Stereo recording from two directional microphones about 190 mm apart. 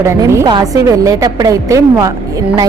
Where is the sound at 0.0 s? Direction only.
15° right (ahead or behind).